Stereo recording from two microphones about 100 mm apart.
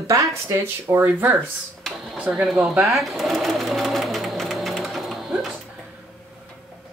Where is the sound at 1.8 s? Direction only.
Centre (ahead or behind).